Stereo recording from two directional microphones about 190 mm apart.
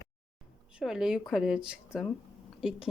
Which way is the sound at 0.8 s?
5° right (ahead or behind).